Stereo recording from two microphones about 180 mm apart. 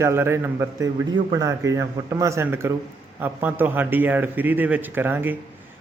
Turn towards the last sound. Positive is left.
turn(degrees=-10)  # may be behind; listen again after turning